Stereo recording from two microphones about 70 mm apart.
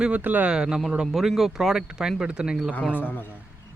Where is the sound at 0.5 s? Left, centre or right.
Centre.